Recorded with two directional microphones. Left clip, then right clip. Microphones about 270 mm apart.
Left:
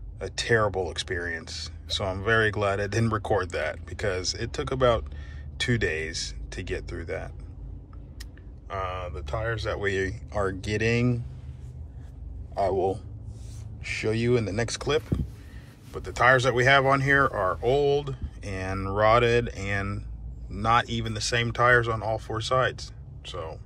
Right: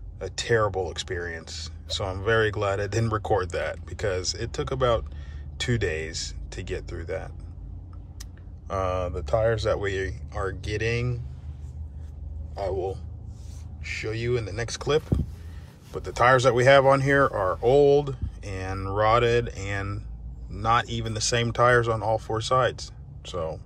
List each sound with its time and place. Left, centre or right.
0.2 s speech: centre
9.8 s speech: centre
12.7 s speech: centre; by 23.6 s right